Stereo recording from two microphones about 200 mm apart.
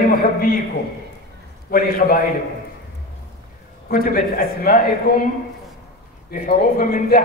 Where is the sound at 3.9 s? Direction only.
45° left (ahead or behind).